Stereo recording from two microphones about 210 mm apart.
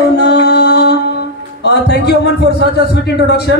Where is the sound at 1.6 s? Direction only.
50° left (ahead or behind).